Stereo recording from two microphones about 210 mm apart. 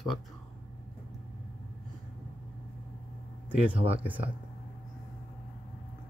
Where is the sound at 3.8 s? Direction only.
10° right (ahead or behind).